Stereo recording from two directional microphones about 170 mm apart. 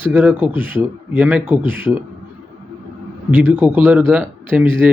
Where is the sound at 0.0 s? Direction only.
10° right (ahead or behind).